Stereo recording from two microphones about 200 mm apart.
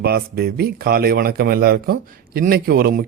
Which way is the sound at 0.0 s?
50° right (ahead or behind).